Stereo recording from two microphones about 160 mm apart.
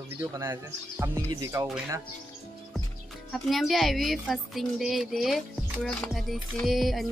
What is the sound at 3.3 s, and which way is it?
A woman's voice, centre (ahead or behind).